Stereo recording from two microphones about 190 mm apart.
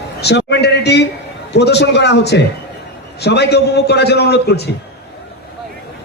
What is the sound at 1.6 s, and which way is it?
A man's voice, 65° left (ahead or behind).